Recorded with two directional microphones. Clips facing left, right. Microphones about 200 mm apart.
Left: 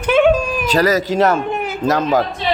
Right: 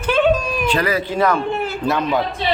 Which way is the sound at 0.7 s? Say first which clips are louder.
Left 5 dB; 40° left (ahead or behind).